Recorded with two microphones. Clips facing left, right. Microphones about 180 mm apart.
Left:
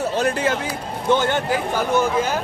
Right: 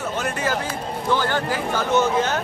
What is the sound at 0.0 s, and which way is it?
Speech, 35° left (ahead or behind).